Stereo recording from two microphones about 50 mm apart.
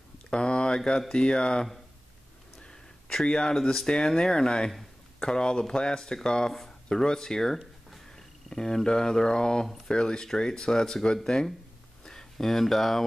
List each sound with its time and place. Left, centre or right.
0.3 s speech: centre